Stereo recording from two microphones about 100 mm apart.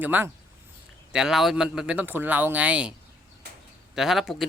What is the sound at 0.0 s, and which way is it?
Speech, 20° right (ahead or behind).